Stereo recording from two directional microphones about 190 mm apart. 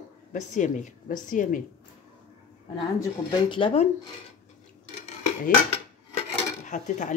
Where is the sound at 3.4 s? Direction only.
25° left (ahead or behind).